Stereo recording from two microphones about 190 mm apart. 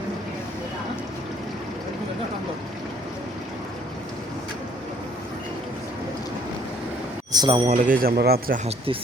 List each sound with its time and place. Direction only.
7.3 s speech: 25° right (ahead or behind)
7.7 s speech: 45° right (ahead or behind)